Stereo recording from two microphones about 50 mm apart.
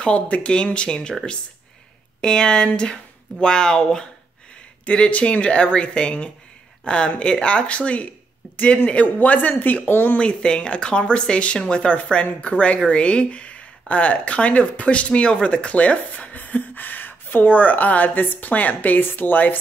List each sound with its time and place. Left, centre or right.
0.0 s speech: left
2.2 s speech: centre
4.8 s speech: left
10.1 s speech: centre; by 19.5 s left